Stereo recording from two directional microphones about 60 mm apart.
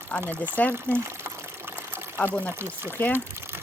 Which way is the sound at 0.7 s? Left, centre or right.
Right.